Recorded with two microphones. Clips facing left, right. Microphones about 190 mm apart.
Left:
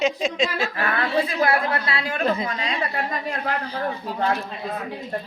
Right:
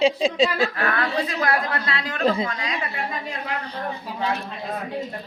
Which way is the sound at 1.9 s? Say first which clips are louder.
Left 2 dB; 10° left (ahead or behind).